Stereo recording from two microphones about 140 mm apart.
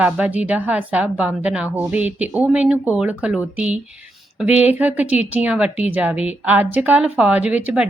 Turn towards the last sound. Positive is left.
turn(degrees=-10)  # may be behind; listen again after turning